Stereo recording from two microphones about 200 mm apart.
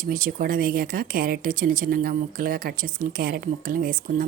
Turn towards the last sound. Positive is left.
turn(degrees=-45)  # may be behind; listen again after turning